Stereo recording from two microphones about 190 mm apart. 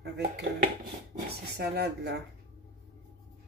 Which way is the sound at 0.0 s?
60° right (ahead or behind).